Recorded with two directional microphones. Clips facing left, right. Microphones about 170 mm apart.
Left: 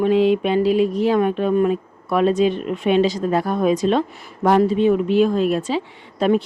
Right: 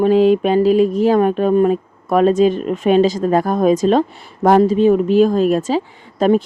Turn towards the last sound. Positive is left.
turn(degrees=-45)  # may be behind; listen again after turning